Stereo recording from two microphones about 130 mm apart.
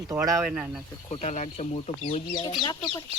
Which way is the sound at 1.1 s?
65° left (ahead or behind).